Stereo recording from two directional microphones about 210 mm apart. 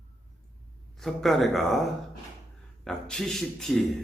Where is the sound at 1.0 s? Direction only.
Centre (ahead or behind).